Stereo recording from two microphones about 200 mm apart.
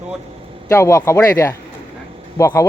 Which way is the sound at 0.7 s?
15° left (ahead or behind).